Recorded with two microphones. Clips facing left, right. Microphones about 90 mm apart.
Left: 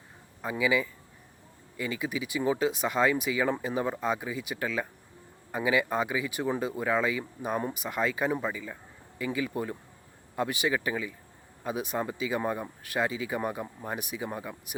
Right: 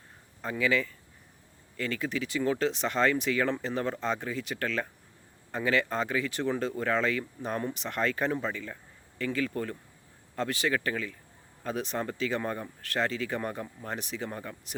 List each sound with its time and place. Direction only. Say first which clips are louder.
0.4 s speech: left 1 dB; 10° left (ahead or behind)